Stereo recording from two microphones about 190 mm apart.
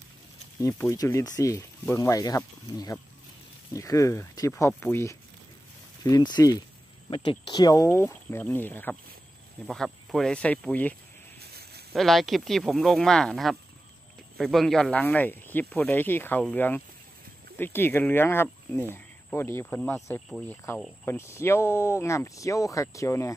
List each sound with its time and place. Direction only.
0.6 s speech: 15° left (ahead or behind)
11.3 s snake: 55° right (ahead or behind)
11.9 s speech: centre (ahead or behind)
20.2 s speech: centre (ahead or behind)
21.0 s speech: 15° left (ahead or behind)